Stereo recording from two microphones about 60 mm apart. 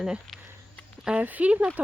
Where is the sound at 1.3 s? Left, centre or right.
Right.